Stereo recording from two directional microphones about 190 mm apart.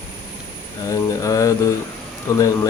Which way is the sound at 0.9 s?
15° left (ahead or behind).